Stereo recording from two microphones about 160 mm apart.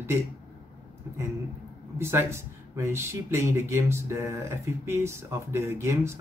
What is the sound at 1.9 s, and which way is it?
Speech, 15° right (ahead or behind).